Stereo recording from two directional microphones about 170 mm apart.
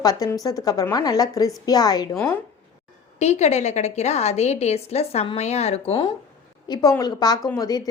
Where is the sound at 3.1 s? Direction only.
40° left (ahead or behind).